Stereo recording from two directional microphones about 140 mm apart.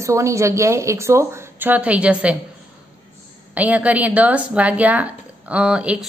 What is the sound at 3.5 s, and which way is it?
A woman's voice, 10° right (ahead or behind).